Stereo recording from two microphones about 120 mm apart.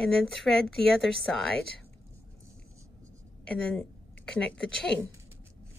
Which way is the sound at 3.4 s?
5° left (ahead or behind).